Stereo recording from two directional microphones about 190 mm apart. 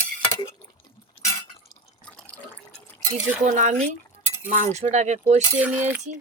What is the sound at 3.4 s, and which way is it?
Speech, 40° right (ahead or behind).